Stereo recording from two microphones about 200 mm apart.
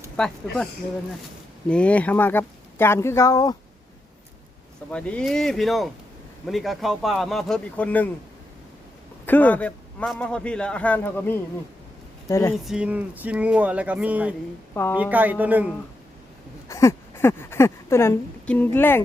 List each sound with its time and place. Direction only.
0.2 s speech: 5° left (ahead or behind)
1.6 s a man's voice: 5° left (ahead or behind)
4.9 s speech: 5° left (ahead or behind)
9.2 s a man's voice: 10° left (ahead or behind)
12.6 s speech: 5° right (ahead or behind)
14.7 s a woman's voice: 10° left (ahead or behind)
14.9 s speech: 10° right (ahead or behind)
16.6 s speech: 15° left (ahead or behind)